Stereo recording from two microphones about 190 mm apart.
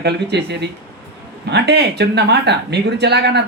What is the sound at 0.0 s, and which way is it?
Speech, 60° right (ahead or behind).